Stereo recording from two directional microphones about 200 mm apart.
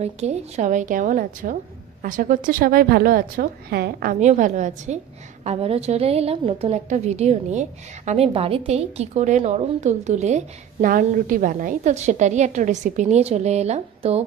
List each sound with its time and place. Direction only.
0.0 s a woman's voice: 35° right (ahead or behind)